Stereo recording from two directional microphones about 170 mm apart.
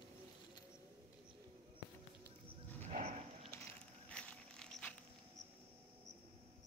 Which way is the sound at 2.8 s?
40° right (ahead or behind).